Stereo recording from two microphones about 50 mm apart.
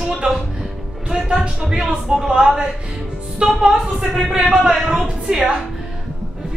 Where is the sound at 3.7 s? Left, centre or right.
Centre.